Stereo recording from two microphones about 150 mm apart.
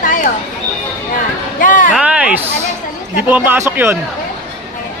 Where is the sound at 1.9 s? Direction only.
5° right (ahead or behind).